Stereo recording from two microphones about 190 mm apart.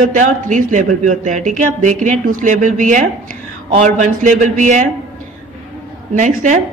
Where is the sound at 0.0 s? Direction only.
40° right (ahead or behind).